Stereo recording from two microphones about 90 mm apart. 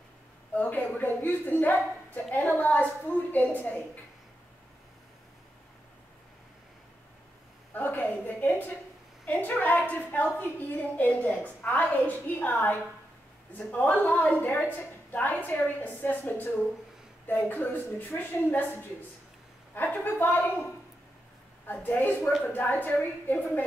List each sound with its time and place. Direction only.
0.6 s a woman's voice: 20° left (ahead or behind)
7.7 s a sound: 20° left (ahead or behind)
10.8 s a woman's voice: 20° left (ahead or behind)
21.7 s a woman's voice: 20° left (ahead or behind)